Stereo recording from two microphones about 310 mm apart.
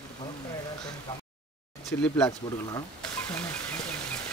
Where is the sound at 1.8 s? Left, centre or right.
Centre.